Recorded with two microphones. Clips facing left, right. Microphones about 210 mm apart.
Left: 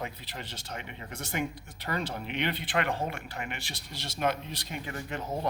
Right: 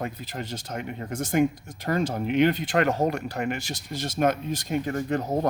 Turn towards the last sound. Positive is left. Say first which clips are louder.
# right 8 dB
turn(degrees=-40)  # may be behind; listen again after turning